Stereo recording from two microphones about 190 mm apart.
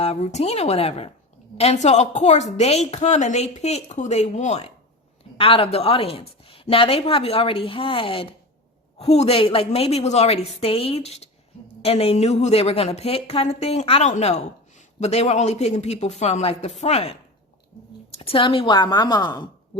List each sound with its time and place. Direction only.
0.0 s a woman's voice: 35° left (ahead or behind)
18.2 s a woman's voice: 25° left (ahead or behind)